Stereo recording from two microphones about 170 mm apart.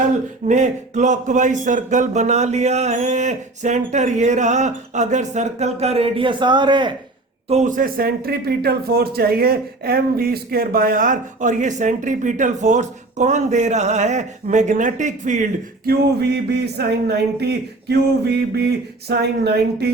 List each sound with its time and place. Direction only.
0.4 s speech: 45° right (ahead or behind); by 6.9 s 25° right (ahead or behind)
7.4 s speech: 45° right (ahead or behind)
15.9 s speech: 70° right (ahead or behind)